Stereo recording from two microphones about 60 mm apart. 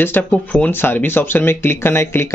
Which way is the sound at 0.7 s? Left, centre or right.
Left.